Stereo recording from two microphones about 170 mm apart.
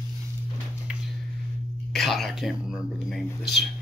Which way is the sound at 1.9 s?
Centre (ahead or behind).